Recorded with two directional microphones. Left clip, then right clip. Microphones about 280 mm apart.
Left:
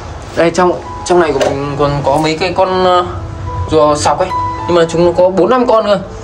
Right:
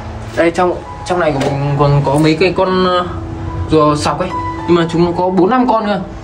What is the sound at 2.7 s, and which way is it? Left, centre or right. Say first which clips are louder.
Speech: left 3 dB; left.